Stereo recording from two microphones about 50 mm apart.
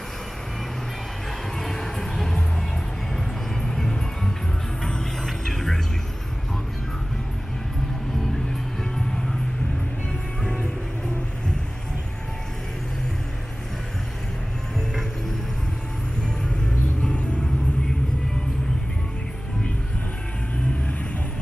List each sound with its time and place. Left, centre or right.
1.6 s music: centre
3.6 s music: centre
17.0 s vehicle: left